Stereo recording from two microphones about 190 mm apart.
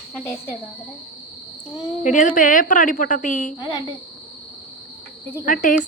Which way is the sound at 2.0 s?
40° left (ahead or behind).